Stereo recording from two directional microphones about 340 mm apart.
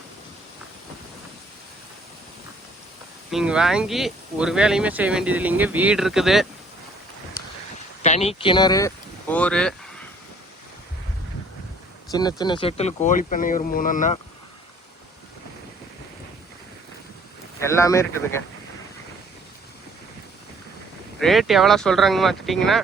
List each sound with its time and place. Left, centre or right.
3.3 s speech: centre
8.0 s speech: centre
12.1 s speech: centre
17.6 s a man's voice: centre
21.2 s speech: centre